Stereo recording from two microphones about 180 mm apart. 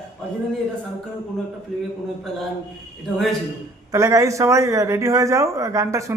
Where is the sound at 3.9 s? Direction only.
15° right (ahead or behind).